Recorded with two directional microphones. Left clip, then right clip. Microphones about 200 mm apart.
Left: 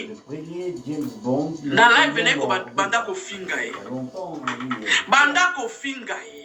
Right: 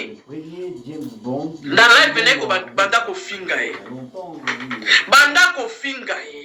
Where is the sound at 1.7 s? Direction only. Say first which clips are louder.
Right 4 dB; 10° right (ahead or behind).